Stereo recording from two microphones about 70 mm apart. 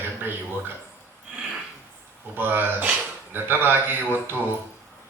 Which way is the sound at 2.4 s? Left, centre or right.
Right.